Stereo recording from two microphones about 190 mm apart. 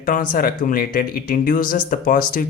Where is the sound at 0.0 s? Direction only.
45° left (ahead or behind).